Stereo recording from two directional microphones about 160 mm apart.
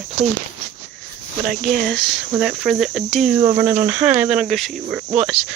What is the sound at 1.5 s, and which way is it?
Speech, 60° right (ahead or behind).